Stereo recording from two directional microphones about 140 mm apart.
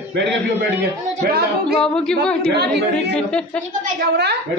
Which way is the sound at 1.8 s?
5° left (ahead or behind).